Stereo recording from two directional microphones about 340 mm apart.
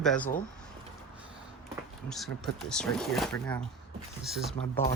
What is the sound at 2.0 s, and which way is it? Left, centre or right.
Speech, centre.